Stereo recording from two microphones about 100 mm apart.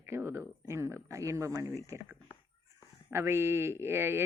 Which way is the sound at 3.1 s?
25° right (ahead or behind).